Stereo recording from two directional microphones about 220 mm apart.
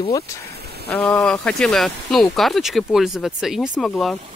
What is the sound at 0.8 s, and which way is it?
Speech, 5° left (ahead or behind).